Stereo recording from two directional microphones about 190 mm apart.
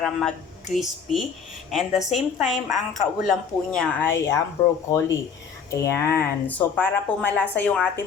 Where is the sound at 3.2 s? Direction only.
5° left (ahead or behind).